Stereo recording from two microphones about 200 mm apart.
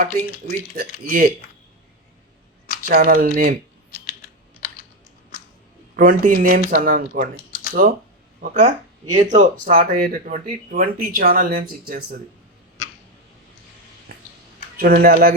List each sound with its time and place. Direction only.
0.0 s speech: 45° right (ahead or behind)
2.8 s speech: 45° right (ahead or behind)
6.0 s speech: 45° right (ahead or behind)
14.8 s speech: 50° right (ahead or behind)